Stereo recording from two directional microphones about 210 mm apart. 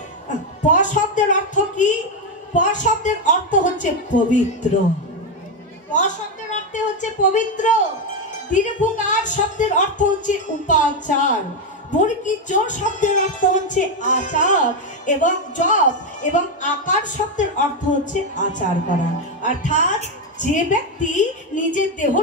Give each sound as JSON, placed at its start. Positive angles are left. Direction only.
{"t": 0.7, "sound": "a woman's voice", "side_deg": 35}
{"t": 5.9, "sound": "a woman's voice", "side_deg": 35}